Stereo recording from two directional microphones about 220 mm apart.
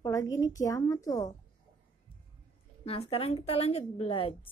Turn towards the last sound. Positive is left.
turn(degrees=25)  # may be behind; listen again after turning